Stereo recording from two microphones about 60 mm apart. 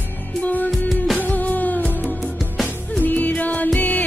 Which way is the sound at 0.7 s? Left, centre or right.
Centre.